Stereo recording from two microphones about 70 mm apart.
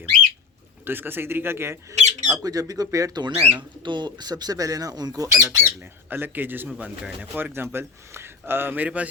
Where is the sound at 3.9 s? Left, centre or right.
Right.